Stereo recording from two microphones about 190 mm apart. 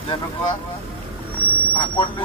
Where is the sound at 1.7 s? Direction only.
25° left (ahead or behind).